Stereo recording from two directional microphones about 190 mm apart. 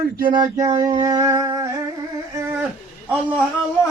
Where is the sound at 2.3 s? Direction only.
15° right (ahead or behind).